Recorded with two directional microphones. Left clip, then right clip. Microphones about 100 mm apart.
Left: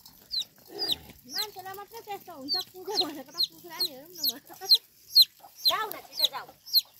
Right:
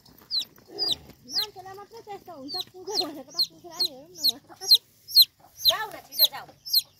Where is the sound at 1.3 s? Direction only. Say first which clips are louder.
Right 4 dB; 5° right (ahead or behind).